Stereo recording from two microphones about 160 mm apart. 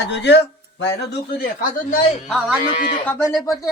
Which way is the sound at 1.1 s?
75° left (ahead or behind).